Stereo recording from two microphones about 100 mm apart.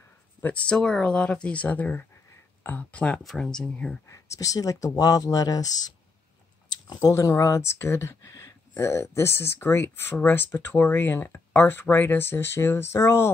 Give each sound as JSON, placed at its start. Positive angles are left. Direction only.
{"t": 0.4, "sound": "speech", "side_deg": 15}
{"t": 4.1, "sound": "speech", "side_deg": 35}
{"t": 6.9, "sound": "speech", "side_deg": 35}